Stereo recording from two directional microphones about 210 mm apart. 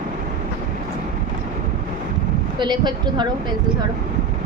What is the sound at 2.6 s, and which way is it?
Speech, 20° right (ahead or behind).